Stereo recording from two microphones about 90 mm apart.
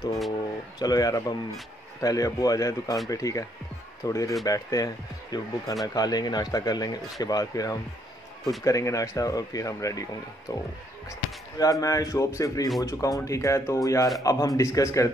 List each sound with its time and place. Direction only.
0.7 s speech: 45° left (ahead or behind)